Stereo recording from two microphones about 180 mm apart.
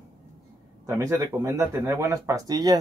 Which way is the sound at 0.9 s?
15° right (ahead or behind).